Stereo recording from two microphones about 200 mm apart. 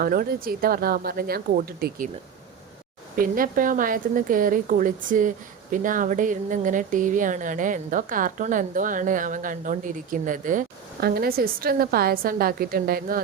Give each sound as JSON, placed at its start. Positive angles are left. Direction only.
{"t": 0.0, "sound": "a woman's voice", "side_deg": -45}
{"t": 3.2, "sound": "a woman's voice", "side_deg": -45}